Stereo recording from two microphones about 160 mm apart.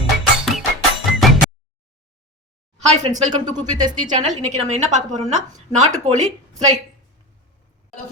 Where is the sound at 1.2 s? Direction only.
Centre (ahead or behind).